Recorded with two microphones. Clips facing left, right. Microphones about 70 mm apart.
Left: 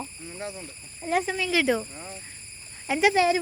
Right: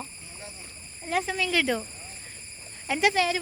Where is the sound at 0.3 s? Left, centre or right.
Left.